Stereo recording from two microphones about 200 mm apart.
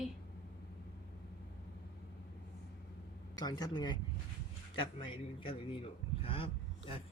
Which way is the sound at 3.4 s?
20° left (ahead or behind).